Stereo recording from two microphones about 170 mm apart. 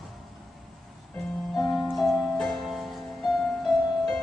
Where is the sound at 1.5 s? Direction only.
Centre (ahead or behind).